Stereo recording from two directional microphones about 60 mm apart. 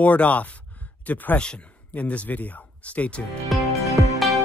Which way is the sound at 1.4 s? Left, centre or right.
Centre.